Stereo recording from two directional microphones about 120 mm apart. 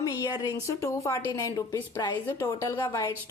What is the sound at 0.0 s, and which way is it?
A woman's voice, 30° left (ahead or behind).